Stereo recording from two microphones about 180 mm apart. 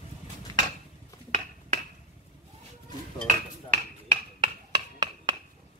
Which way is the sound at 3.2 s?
45° right (ahead or behind).